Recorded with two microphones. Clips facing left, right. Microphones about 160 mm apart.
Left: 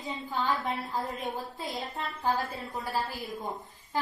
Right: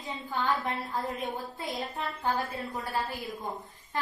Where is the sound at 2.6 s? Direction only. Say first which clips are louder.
Right 1 dB; 20° left (ahead or behind).